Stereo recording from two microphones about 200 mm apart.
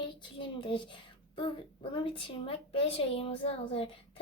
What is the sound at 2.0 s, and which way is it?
A woman's voice, 25° left (ahead or behind).